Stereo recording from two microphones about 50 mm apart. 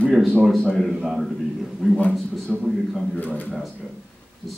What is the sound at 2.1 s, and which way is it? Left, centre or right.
Speech, centre.